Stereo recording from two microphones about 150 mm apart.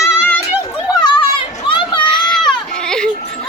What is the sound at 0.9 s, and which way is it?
Children playing, 30° left (ahead or behind).